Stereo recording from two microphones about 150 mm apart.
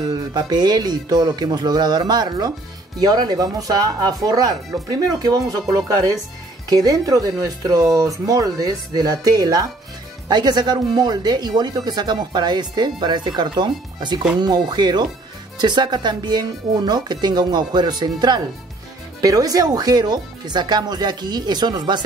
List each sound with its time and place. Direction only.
0.0 s speech: 30° right (ahead or behind)